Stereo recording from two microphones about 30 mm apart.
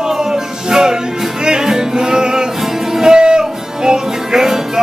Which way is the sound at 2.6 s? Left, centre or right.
Centre.